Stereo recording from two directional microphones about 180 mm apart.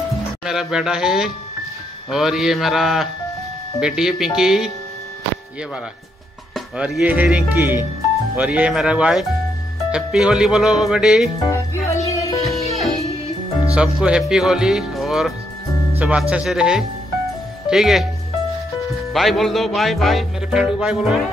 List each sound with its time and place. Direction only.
0.5 s speech: 5° right (ahead or behind)
6.5 s speech: centre (ahead or behind)
11.5 s music: 15° left (ahead or behind)
12.5 s music: centre (ahead or behind)
13.7 s speech: 5° right (ahead or behind)
19.1 s speech: centre (ahead or behind)